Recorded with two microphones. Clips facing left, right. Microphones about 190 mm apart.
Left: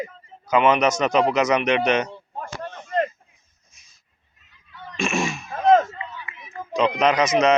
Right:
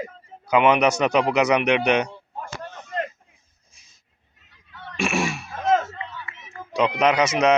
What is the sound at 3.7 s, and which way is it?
Dog, 30° right (ahead or behind).